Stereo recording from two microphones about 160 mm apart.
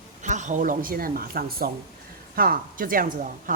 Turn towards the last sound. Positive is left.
turn(degrees=-55)  # may be behind; listen again after turning